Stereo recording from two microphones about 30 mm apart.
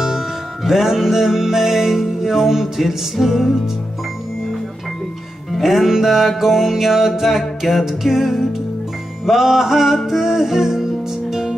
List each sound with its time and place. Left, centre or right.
0.7 s music: centre
5.6 s music: centre